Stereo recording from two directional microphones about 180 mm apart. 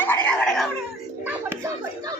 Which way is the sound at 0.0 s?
10° left (ahead or behind).